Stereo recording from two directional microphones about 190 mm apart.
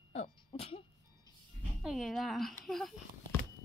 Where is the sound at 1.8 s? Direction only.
Centre (ahead or behind).